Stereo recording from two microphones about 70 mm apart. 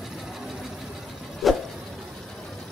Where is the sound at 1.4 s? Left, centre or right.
Centre.